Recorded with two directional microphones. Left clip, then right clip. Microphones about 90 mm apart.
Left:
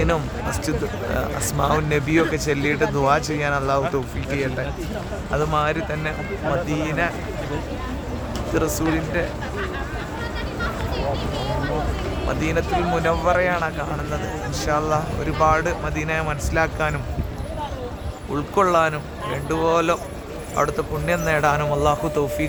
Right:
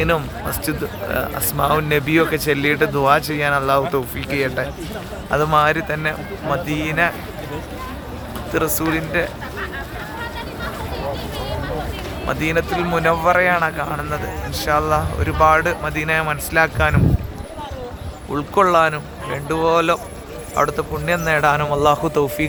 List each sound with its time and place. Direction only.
0.6 s speech: 30° right (ahead or behind)
2.0 s speech: 40° right (ahead or behind)
4.3 s a man's voice: 60° right (ahead or behind)
5.4 s a man's voice: 90° right
8.5 s a man's voice: 60° right (ahead or behind)
12.3 s a man's voice: 60° right (ahead or behind)
14.6 s speech: 55° right (ahead or behind)
18.3 s speech: 60° right (ahead or behind)
21.7 s a man's voice: 90° right